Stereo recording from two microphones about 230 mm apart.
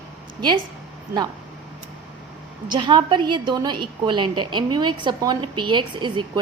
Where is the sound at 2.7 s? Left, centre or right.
Centre.